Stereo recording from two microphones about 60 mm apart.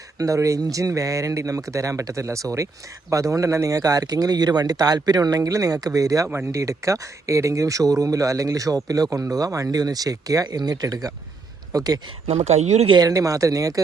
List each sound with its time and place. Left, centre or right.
0.2 s speech: right
6.5 s speech: right
13.0 s speech: right